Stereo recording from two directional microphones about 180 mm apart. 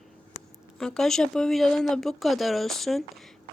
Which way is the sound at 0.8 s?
Centre (ahead or behind).